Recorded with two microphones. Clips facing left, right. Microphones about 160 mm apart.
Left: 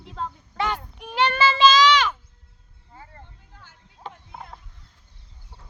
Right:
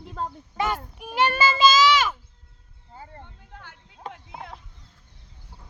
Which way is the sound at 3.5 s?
65° right (ahead or behind).